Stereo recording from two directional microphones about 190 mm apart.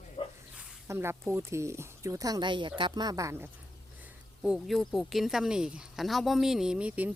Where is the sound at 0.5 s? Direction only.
15° right (ahead or behind).